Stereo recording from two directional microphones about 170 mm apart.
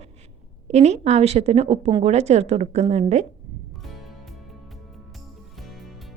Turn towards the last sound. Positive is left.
turn(degrees=0)  # may be behind; listen again after turning